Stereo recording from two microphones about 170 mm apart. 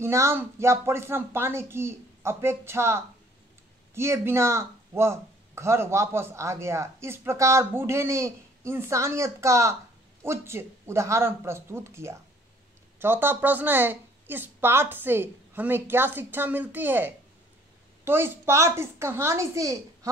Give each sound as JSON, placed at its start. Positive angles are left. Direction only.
{"t": 0.0, "sound": "speech", "side_deg": -15}